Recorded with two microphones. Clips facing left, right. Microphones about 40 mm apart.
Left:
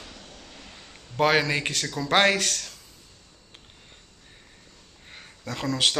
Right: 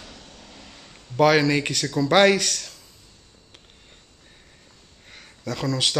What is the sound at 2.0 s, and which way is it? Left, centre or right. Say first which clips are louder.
Speech: right 5 dB; left.